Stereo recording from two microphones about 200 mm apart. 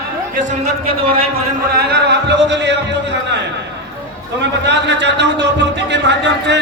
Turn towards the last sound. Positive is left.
turn(degrees=-60)  # may be behind; listen again after turning